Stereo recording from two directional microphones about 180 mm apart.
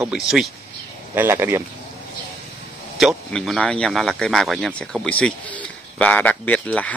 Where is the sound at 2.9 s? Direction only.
Centre (ahead or behind).